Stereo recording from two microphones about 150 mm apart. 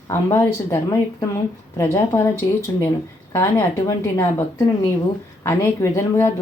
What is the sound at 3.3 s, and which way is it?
Speech, 20° left (ahead or behind).